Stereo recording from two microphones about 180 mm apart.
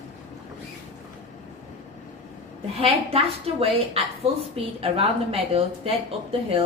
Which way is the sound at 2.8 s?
35° right (ahead or behind).